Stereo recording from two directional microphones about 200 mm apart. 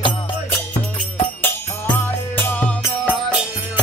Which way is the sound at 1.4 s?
10° left (ahead or behind).